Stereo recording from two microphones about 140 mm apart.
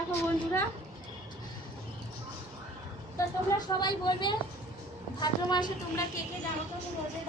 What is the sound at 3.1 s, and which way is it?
Speech, 30° left (ahead or behind).